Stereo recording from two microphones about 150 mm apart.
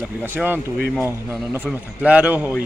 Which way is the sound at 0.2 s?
15° right (ahead or behind).